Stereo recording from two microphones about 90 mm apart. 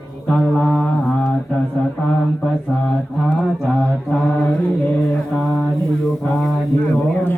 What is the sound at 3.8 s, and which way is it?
Mantra, 10° left (ahead or behind).